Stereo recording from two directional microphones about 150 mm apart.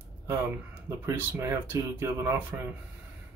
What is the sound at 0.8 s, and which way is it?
Speech, 20° right (ahead or behind).